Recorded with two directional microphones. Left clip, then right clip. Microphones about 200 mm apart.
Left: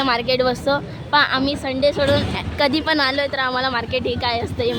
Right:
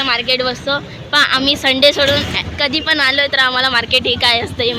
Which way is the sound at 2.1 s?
15° left (ahead or behind).